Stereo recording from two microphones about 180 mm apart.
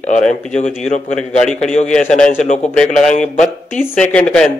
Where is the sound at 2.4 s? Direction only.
40° left (ahead or behind).